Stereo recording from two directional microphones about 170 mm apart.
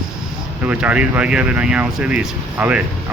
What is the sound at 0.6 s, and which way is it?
Speech, 10° right (ahead or behind).